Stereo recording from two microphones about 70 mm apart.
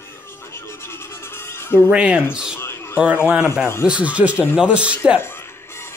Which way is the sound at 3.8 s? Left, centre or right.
Centre.